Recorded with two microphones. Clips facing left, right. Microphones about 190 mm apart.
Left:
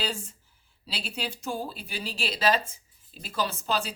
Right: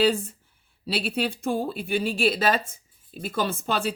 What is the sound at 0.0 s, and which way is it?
A woman's voice, 55° right (ahead or behind).